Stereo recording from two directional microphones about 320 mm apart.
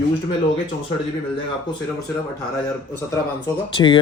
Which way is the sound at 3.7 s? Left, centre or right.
Centre.